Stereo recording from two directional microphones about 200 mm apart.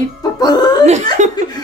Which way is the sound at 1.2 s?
35° right (ahead or behind).